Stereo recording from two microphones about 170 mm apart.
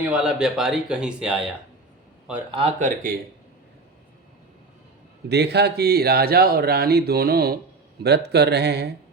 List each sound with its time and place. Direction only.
0.0 s speech: 5° right (ahead or behind)
2.5 s speech: 30° right (ahead or behind)
2.7 s speech: 50° right (ahead or behind)
5.3 s speech: 75° right (ahead or behind)
8.0 s speech: 75° right (ahead or behind)